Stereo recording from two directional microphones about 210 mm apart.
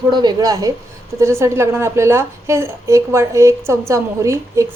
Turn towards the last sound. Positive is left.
turn(degrees=-15)  # may be behind; listen again after turning